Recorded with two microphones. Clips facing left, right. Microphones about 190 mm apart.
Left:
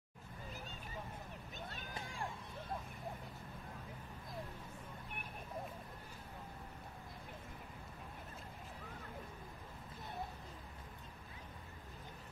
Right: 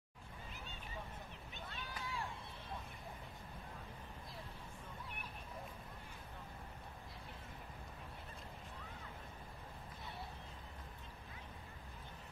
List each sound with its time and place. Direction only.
1.7 s run: 45° left (ahead or behind)